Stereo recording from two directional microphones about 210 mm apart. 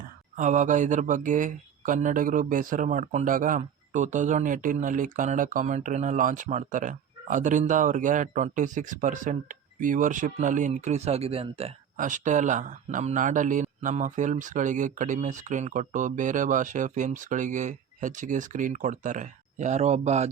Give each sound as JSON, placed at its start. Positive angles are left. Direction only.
{"t": 0.3, "sound": "speech", "side_deg": -35}